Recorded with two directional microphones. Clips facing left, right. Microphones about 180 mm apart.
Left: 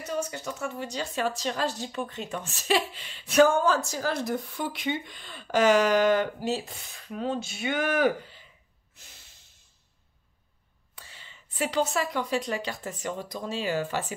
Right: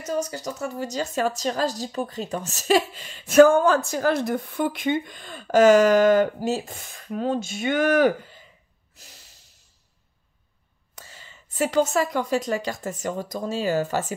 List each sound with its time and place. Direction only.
0.0 s a woman's voice: 40° right (ahead or behind)
8.9 s snort: 35° right (ahead or behind)
11.0 s a woman's voice: 45° right (ahead or behind)